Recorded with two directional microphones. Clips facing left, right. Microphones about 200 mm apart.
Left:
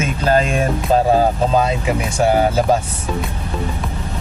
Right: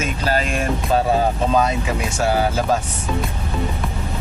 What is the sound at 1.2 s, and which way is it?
Speech, 30° left (ahead or behind).